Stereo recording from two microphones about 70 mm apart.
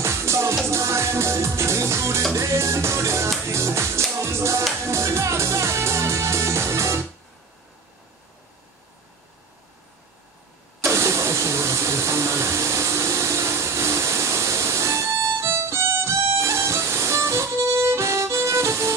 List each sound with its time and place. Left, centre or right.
0.0 s music: right
10.8 s vehicle: right